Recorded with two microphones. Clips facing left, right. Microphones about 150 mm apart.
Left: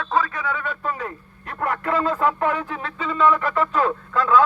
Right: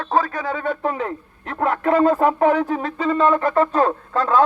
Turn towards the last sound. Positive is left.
turn(degrees=-35)  # may be behind; listen again after turning